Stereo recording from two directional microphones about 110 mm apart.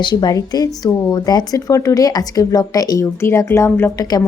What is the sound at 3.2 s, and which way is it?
Speech, 25° left (ahead or behind).